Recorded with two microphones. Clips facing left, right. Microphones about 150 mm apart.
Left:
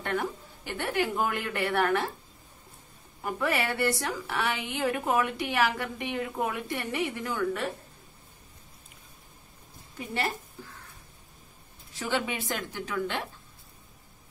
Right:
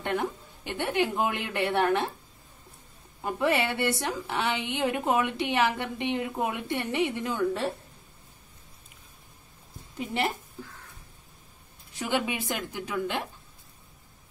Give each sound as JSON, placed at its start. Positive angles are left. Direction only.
{"t": 0.0, "sound": "a woman's voice", "side_deg": -20}
{"t": 3.2, "sound": "a woman's voice", "side_deg": -20}
{"t": 9.9, "sound": "a woman's voice", "side_deg": -20}
{"t": 12.0, "sound": "a woman's voice", "side_deg": -15}